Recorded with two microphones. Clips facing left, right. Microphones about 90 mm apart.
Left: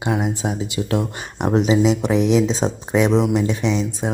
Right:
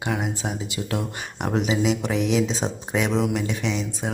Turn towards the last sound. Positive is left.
turn(degrees=30)  # may be behind; listen again after turning